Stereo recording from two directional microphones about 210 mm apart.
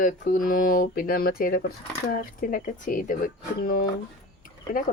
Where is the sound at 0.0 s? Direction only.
40° left (ahead or behind).